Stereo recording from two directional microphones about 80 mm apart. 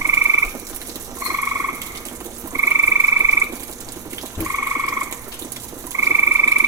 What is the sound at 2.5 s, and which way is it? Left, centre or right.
Frog, right.